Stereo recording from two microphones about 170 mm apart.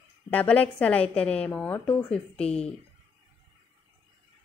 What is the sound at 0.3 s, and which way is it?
A woman's voice, 10° left (ahead or behind).